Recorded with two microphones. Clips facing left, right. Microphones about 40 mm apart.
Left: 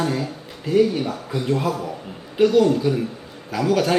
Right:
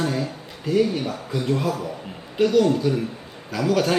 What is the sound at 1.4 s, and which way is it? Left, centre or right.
A man's voice, centre.